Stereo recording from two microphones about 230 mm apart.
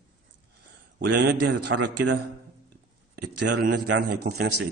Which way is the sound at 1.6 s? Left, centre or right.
Right.